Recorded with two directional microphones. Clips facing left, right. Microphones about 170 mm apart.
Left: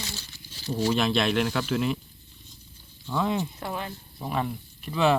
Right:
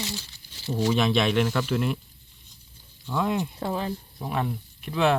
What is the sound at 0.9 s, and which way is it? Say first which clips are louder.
Speech: right 1 dB; centre (ahead or behind).